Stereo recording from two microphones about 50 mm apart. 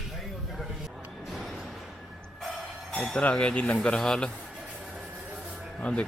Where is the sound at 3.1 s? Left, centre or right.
Left.